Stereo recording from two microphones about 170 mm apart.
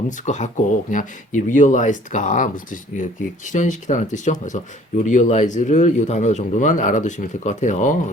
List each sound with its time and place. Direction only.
0.3 s speech: 45° left (ahead or behind)
3.5 s speech: 45° left (ahead or behind)